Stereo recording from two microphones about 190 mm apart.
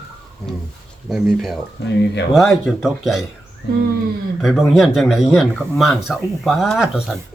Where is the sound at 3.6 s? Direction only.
65° left (ahead or behind).